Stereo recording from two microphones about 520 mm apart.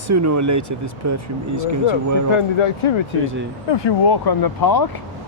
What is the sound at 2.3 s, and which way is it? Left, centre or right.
Speech, left.